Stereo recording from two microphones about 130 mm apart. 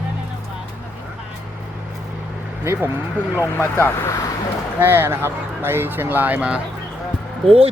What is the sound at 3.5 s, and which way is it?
Speech, 20° left (ahead or behind).